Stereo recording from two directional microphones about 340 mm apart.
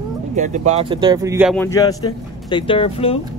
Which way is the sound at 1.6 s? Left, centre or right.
Centre.